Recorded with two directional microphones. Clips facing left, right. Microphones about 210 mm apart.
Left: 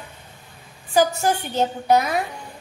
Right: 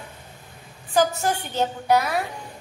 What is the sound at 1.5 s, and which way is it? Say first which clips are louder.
Child singing: left 1 dB; 15° left (ahead or behind).